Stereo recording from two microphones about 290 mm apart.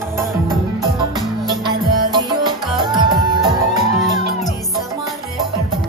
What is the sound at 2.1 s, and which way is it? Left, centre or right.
Music, centre.